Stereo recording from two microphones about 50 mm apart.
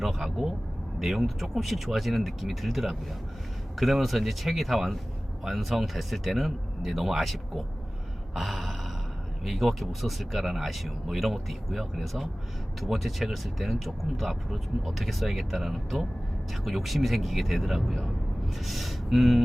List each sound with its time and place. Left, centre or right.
0.0 s speech: centre